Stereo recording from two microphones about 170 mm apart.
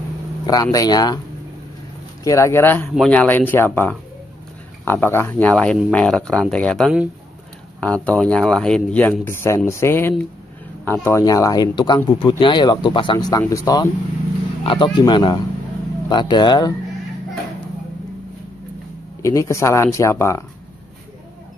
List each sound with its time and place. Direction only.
0.5 s speech: 20° left (ahead or behind)
2.2 s speech: 15° left (ahead or behind)
19.2 s speech: 15° left (ahead or behind)